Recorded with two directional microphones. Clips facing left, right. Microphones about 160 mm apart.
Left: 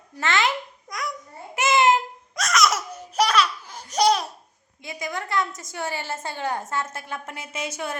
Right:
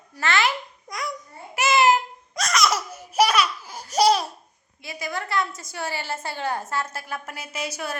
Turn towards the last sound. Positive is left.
turn(degrees=25)  # may be behind; listen again after turning